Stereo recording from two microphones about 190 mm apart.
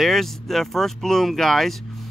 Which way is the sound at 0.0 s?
Centre (ahead or behind).